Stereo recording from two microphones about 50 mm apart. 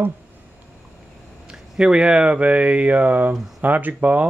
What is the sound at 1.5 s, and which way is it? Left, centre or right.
Speech, centre.